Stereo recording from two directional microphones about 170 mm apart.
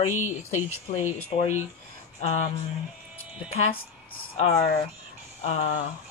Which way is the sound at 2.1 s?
40° left (ahead or behind).